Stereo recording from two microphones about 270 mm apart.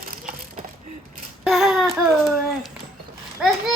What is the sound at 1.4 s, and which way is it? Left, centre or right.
A child's voice, centre.